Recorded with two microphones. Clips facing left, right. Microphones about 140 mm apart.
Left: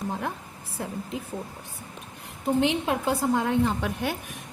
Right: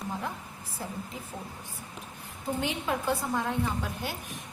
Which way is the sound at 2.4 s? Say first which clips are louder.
Left 8 dB; 80° left.